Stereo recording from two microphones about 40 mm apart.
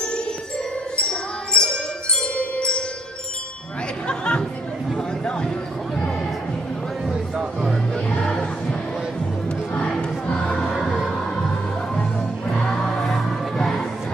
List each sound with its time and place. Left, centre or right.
0.9 s music: left
4.1 s chatter: left
4.9 s a sound: left
7.9 s music: centre
11.9 s music: left
12.5 s music: centre